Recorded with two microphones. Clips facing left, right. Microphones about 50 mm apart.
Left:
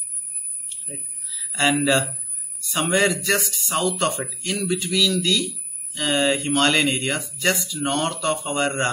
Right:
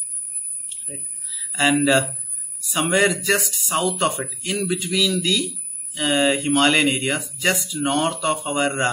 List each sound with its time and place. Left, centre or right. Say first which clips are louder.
0.7 s speech: even; centre